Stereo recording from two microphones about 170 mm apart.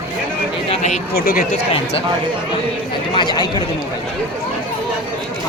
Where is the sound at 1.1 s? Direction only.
60° left (ahead or behind).